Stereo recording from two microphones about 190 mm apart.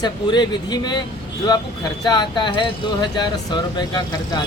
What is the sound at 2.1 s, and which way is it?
Speech, 20° left (ahead or behind).